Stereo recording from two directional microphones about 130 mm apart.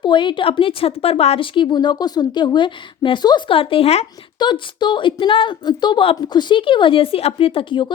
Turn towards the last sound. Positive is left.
turn(degrees=40)  # may be behind; listen again after turning